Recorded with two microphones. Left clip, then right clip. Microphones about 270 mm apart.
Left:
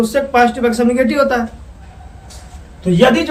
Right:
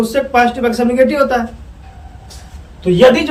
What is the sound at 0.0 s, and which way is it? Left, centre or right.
A man's voice, centre.